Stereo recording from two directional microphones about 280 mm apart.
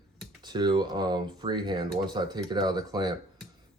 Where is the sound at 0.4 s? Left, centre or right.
Centre.